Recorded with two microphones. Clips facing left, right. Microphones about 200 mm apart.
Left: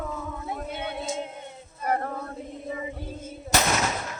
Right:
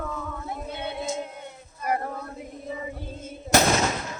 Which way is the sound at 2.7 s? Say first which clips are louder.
Even; 15° left (ahead or behind).